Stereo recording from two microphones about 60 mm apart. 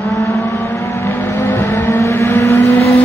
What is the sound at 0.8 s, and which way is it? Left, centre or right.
Vehicle, left.